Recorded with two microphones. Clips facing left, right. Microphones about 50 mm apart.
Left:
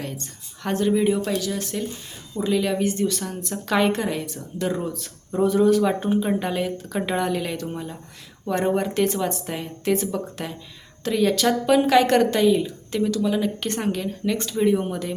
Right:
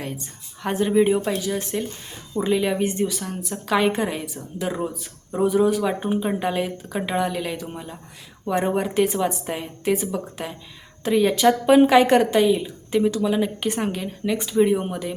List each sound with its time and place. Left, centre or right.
0.0 s speech: centre
3.1 s speech: centre